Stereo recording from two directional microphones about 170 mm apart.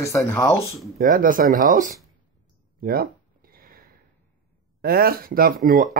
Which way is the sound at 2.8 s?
60° right (ahead or behind).